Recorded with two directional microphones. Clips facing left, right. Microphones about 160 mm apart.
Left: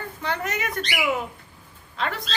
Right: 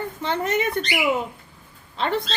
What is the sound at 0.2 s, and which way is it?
Speech, 25° right (ahead or behind).